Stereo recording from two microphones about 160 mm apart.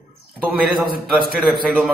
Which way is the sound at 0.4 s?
Centre (ahead or behind).